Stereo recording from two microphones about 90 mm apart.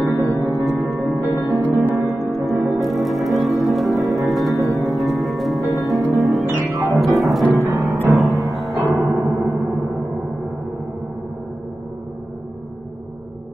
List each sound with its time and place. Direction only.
0.0 s music: 25° left (ahead or behind)
0.6 s music: 30° right (ahead or behind)
1.2 s music: 30° left (ahead or behind)
1.5 s music: 25° right (ahead or behind)
2.8 s music: centre (ahead or behind)
8.7 s gong: 35° right (ahead or behind)